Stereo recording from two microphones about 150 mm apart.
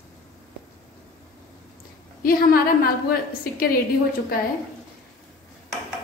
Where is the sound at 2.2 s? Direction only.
85° left.